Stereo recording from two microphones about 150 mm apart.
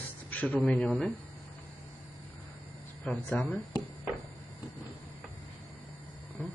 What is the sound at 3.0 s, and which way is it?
Speech, 10° left (ahead or behind).